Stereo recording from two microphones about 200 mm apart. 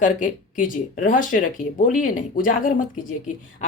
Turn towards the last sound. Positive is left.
turn(degrees=40)  # may be behind; listen again after turning